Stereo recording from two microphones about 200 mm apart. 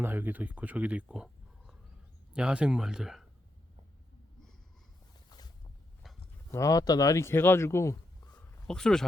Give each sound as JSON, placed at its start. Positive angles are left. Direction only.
{"t": 0.0, "sound": "speech", "side_deg": -10}
{"t": 5.3, "sound": "boat", "side_deg": 20}
{"t": 6.5, "sound": "speech", "side_deg": 15}
{"t": 8.6, "sound": "speech", "side_deg": 5}